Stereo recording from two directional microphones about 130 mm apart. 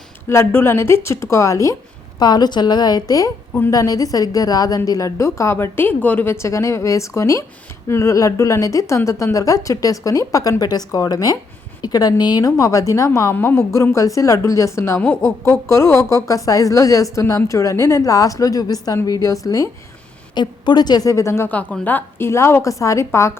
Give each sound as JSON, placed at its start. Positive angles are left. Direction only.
{"t": 0.3, "sound": "a woman's voice", "side_deg": 20}